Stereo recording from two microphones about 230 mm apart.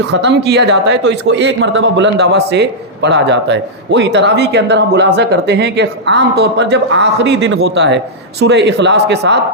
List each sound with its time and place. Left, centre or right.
0.1 s speech: right